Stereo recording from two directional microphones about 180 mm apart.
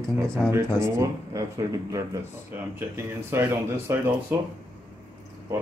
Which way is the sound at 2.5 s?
15° right (ahead or behind).